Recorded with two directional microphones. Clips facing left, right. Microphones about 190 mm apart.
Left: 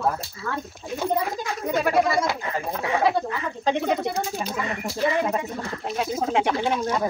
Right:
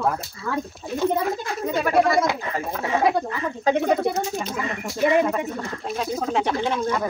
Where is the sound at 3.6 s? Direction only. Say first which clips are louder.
Right 3 dB; 5° right (ahead or behind).